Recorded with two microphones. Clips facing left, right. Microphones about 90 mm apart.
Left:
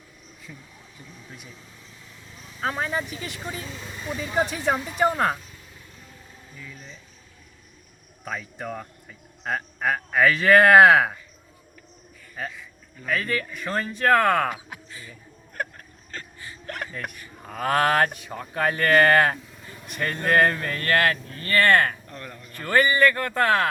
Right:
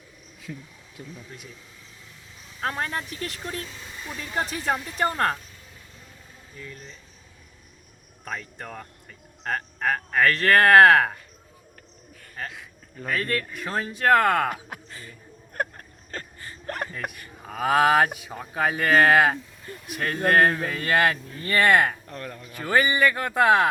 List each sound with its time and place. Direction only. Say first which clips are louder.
2.6 s speech: left 2 dB; 5° left (ahead or behind)
6.6 s speech: right 2 dB; 5° left (ahead or behind)
8.2 s speech: left 2 dB; 5° left (ahead or behind)
13.1 s speech: left 1 dB; centre (ahead or behind)
14.5 s speech: right 1 dB; 45° right (ahead or behind)
16.1 s a sound: right 1 dB; 40° right (ahead or behind)
16.9 s speech: right 1 dB; centre (ahead or behind)